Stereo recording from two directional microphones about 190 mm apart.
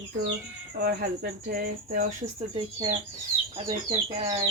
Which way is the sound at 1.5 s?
50° right (ahead or behind).